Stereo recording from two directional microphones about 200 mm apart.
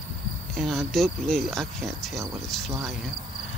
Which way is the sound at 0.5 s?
Centre (ahead or behind).